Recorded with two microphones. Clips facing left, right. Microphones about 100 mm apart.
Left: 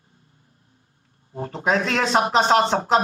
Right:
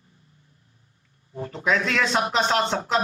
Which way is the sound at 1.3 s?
40° left (ahead or behind).